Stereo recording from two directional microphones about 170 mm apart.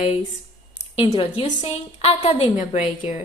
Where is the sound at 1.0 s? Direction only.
35° left (ahead or behind).